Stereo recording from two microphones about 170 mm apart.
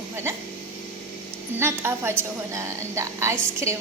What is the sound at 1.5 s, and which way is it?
A woman's voice, 15° right (ahead or behind).